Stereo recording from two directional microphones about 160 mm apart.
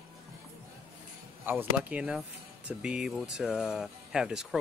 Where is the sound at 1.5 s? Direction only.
10° right (ahead or behind).